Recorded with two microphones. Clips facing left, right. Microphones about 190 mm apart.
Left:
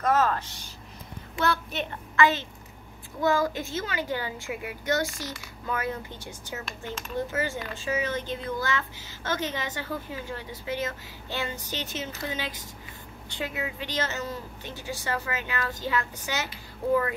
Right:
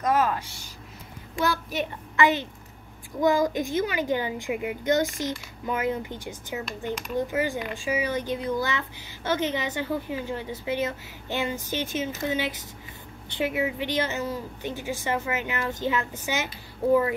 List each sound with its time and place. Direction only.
0.0 s a woman's voice: 15° right (ahead or behind)